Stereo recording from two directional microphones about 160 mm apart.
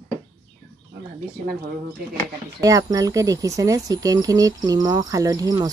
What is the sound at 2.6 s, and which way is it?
Speech, 20° right (ahead or behind).